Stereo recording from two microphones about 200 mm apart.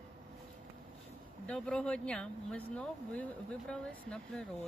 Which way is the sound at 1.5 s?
5° left (ahead or behind).